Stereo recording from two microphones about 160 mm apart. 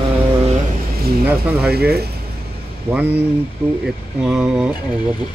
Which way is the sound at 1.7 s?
85° right.